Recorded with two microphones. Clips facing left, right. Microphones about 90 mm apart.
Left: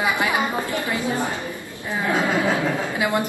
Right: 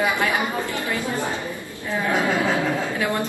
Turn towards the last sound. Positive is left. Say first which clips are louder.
# left 2 dB
turn(degrees=15)  # may be behind; listen again after turning